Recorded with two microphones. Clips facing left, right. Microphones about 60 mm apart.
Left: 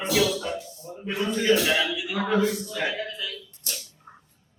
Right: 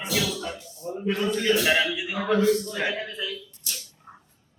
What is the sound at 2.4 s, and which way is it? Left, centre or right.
Speech, centre.